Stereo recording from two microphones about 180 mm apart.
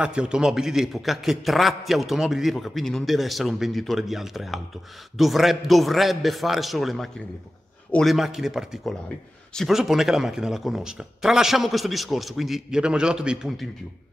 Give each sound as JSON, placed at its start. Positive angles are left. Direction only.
{"t": 0.0, "sound": "a man's voice", "side_deg": -5}